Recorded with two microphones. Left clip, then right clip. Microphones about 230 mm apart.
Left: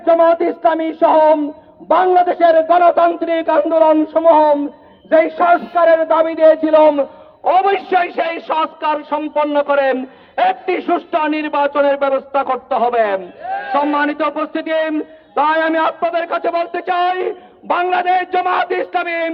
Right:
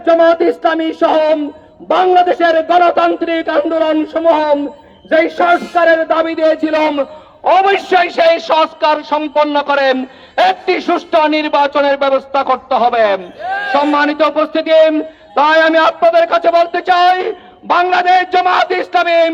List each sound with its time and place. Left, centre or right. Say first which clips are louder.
0.0 s a man's voice: right 2 dB; right